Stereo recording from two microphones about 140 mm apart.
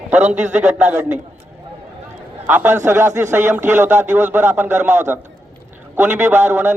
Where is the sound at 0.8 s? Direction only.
10° right (ahead or behind).